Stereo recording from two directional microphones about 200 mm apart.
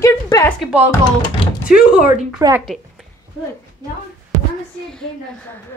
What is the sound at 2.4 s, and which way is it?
Speech, 15° right (ahead or behind).